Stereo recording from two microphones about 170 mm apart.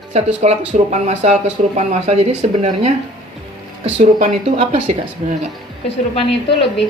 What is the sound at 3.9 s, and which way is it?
Speech, 35° right (ahead or behind).